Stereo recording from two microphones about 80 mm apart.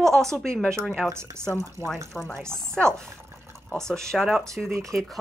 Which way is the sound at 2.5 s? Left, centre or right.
Centre.